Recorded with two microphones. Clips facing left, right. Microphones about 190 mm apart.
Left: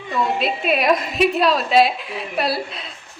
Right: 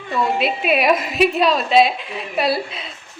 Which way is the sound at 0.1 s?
Centre (ahead or behind).